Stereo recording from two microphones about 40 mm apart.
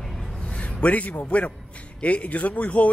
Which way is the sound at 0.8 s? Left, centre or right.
Left.